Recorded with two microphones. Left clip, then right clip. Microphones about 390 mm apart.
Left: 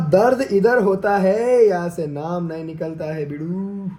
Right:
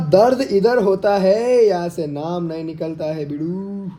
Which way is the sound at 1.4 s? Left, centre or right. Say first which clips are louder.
Even; centre.